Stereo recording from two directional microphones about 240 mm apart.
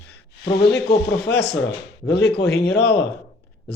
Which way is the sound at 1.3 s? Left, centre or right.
Left.